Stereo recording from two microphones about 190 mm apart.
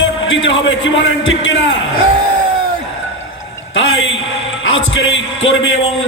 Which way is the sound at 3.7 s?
80° left.